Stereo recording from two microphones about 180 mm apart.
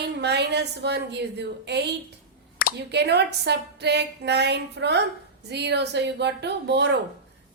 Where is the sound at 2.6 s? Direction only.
50° left (ahead or behind).